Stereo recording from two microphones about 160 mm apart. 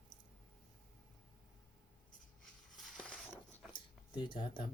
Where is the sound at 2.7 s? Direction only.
5° left (ahead or behind).